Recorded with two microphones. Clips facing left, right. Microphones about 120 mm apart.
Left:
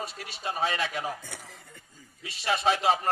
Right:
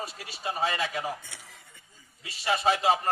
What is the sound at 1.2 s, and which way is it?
Speech, 90° left.